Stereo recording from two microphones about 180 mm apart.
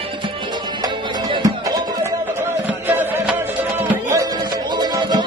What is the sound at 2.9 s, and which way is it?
Music, 10° right (ahead or behind).